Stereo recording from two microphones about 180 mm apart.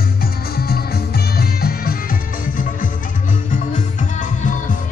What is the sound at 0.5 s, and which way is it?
Music, 60° left (ahead or behind).